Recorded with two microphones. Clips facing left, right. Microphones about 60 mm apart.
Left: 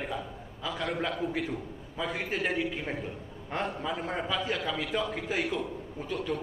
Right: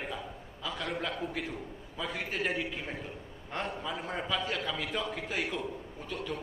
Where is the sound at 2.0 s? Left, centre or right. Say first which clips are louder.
Left 3 dB; centre.